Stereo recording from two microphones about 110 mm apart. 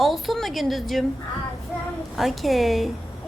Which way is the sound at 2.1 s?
Centre (ahead or behind).